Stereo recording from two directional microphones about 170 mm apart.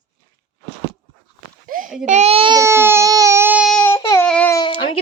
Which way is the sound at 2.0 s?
40° right (ahead or behind).